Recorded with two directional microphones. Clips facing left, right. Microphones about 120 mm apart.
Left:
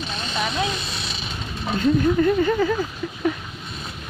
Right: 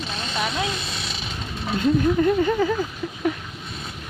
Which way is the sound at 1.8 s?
15° right (ahead or behind).